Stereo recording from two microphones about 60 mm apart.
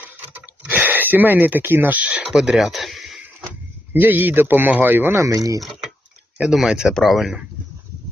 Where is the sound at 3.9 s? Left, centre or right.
Right.